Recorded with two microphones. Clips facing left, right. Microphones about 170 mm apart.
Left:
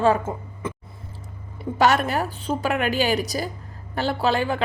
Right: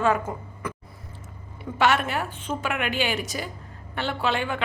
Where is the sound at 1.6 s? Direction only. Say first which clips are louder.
Left 3 dB; 40° left (ahead or behind).